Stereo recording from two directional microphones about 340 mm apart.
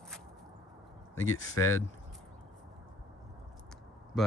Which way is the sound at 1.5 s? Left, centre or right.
Centre.